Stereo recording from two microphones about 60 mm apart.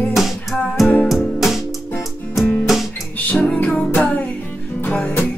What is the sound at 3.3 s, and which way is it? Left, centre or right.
Music, centre.